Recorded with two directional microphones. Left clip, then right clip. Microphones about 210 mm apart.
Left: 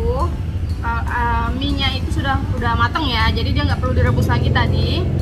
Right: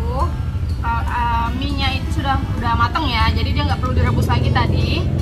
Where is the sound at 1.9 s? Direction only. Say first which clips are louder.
Even; 5° left (ahead or behind).